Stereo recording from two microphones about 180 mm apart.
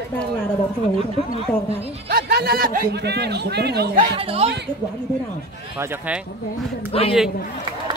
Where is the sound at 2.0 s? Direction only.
60° right (ahead or behind).